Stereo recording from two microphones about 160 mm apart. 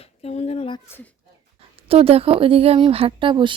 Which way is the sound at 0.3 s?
40° left (ahead or behind).